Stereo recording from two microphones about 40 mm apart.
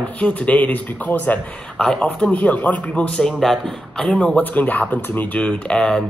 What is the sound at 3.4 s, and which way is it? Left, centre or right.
Speech, centre.